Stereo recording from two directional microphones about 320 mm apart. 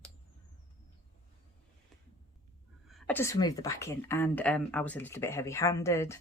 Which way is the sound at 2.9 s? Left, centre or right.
Centre.